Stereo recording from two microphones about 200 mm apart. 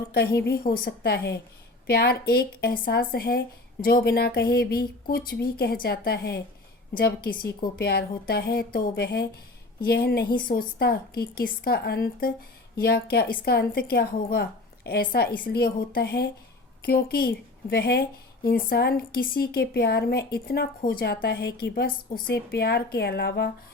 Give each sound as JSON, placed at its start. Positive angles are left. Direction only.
{"t": 0.1, "sound": "a woman's voice", "side_deg": 55}